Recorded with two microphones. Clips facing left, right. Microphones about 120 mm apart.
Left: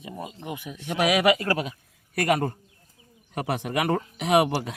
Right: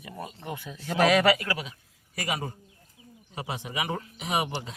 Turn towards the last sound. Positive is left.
turn(degrees=65)  # may be behind; listen again after turning